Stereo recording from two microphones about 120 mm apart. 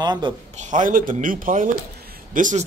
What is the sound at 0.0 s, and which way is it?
Speech, 40° right (ahead or behind).